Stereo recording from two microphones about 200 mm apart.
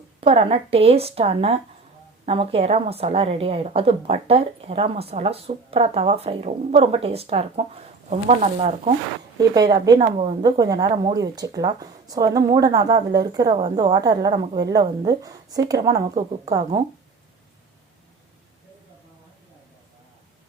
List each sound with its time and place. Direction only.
0.2 s a woman's voice: 30° right (ahead or behind)
9.6 s a woman's voice: 20° right (ahead or behind)